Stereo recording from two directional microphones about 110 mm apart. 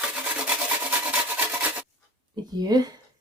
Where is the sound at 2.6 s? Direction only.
40° right (ahead or behind).